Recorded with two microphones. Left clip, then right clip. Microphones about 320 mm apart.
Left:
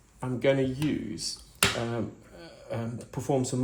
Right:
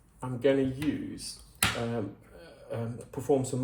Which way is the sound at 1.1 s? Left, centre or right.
Left.